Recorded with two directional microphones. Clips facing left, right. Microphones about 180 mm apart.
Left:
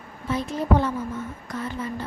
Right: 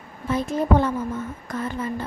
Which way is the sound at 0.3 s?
50° right (ahead or behind).